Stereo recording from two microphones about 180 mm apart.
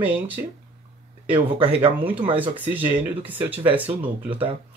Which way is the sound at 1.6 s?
30° right (ahead or behind).